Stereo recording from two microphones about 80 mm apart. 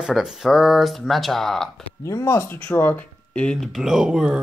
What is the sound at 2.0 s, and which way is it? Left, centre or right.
Speech, left.